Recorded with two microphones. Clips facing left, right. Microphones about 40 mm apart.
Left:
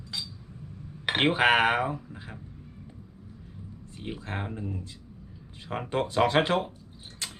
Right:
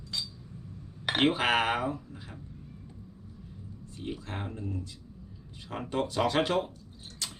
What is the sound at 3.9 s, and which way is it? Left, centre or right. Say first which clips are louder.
Speech: left 2 dB; left.